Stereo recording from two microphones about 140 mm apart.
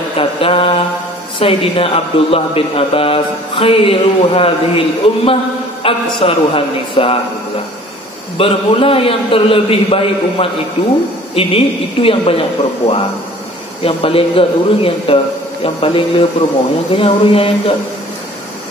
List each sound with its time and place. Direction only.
0.2 s mantra: 40° left (ahead or behind)
1.4 s a man's voice: 40° left (ahead or behind)
8.4 s a man's voice: 45° left (ahead or behind)